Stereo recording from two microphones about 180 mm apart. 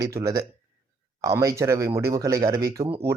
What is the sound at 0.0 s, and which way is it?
A man's voice, 20° right (ahead or behind).